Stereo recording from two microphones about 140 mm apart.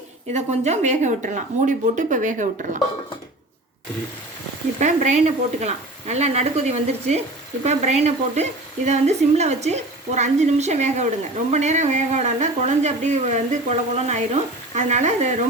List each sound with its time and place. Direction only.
0.3 s speech: 55° right (ahead or behind)
4.8 s speech: 60° right (ahead or behind)